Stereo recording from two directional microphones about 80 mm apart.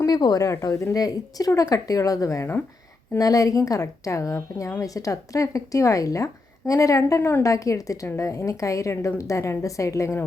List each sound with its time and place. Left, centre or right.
0.0 s speech: left
0.6 s speech: left
7.2 s a woman's voice: left
7.4 s a woman's voice: left